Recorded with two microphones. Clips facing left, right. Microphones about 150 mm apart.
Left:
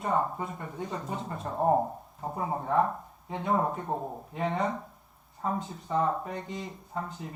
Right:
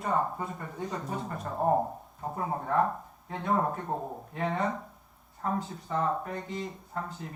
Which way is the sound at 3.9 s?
10° left (ahead or behind).